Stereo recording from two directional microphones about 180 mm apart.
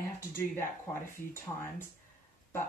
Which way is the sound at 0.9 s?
10° left (ahead or behind).